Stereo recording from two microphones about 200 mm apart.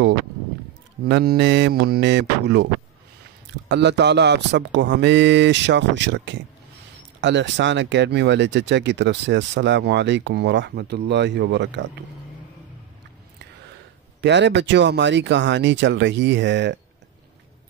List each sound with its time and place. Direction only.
1.0 s speech: 55° right (ahead or behind)
14.2 s speech: 60° right (ahead or behind)